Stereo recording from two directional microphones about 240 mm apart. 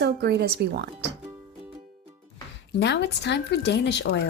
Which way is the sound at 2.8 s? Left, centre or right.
Left.